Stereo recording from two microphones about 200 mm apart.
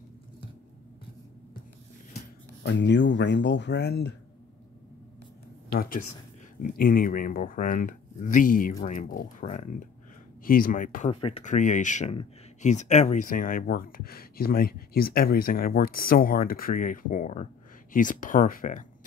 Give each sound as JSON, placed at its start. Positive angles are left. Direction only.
{"t": 2.6, "sound": "speech", "side_deg": 65}
{"t": 5.7, "sound": "speech", "side_deg": 45}
{"t": 11.1, "sound": "speech", "side_deg": 30}
{"t": 11.4, "sound": "speech", "side_deg": 40}